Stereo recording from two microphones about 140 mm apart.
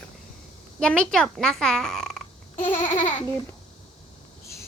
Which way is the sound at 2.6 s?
65° left (ahead or behind).